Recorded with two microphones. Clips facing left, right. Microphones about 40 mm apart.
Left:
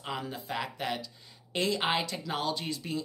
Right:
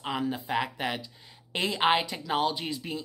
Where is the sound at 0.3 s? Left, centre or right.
Right.